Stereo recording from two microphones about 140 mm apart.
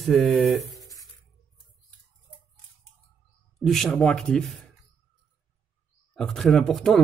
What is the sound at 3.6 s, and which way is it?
Speech, centre (ahead or behind).